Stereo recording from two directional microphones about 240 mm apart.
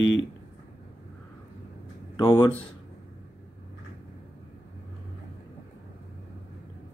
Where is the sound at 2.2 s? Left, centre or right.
Centre.